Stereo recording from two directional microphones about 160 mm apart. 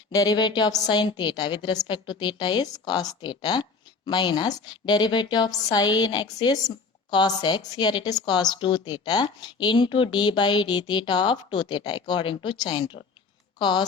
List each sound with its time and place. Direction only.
0.1 s a woman's voice: 25° left (ahead or behind)